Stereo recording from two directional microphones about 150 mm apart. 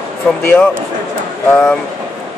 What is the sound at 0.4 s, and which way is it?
Speech, 15° left (ahead or behind).